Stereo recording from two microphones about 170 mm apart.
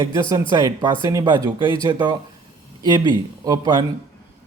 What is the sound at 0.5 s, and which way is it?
A man's voice, 25° right (ahead or behind).